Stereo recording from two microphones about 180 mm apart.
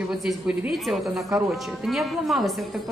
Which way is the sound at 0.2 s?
5° right (ahead or behind).